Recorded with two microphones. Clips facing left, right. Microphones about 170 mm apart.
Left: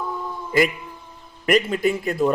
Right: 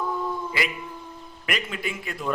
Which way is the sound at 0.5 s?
45° left (ahead or behind).